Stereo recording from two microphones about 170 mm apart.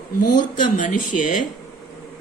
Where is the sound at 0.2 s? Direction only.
50° left (ahead or behind).